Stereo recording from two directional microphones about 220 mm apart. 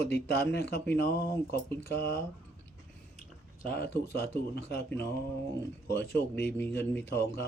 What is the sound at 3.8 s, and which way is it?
Speech, 45° left (ahead or behind).